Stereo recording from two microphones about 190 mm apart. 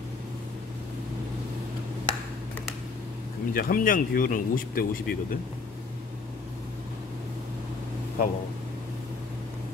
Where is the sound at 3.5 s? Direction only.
50° left (ahead or behind).